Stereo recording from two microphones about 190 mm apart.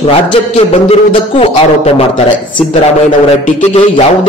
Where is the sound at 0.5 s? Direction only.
35° left (ahead or behind).